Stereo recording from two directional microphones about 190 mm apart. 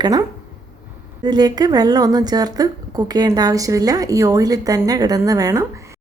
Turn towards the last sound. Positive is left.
turn(degrees=-15)  # may be behind; listen again after turning